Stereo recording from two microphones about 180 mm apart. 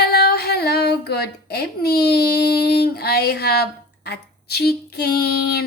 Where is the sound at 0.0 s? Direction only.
60° left (ahead or behind).